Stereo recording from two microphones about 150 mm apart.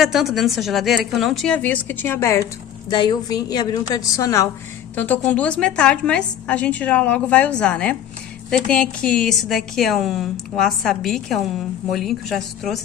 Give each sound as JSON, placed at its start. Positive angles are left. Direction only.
{"t": 0.0, "sound": "a woman's voice", "side_deg": 0}
{"t": 2.9, "sound": "a woman's voice", "side_deg": 30}